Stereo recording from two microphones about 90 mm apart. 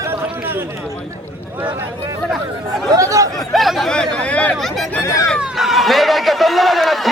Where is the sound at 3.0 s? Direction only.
35° right (ahead or behind).